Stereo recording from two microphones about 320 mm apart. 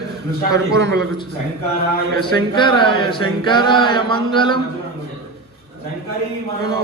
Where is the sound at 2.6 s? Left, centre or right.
Centre.